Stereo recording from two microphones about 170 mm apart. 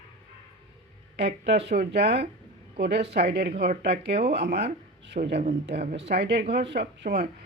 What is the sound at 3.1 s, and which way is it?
Speech, 85° right.